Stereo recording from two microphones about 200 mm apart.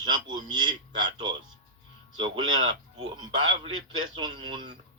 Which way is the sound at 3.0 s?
25° right (ahead or behind).